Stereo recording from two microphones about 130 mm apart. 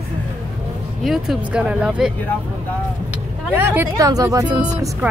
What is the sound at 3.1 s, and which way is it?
Vehicle, 15° right (ahead or behind).